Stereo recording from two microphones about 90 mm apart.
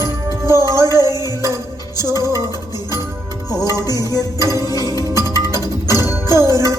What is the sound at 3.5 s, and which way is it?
Music, 45° left (ahead or behind).